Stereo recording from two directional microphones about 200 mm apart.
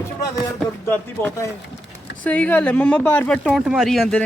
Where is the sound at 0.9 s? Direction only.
10° left (ahead or behind).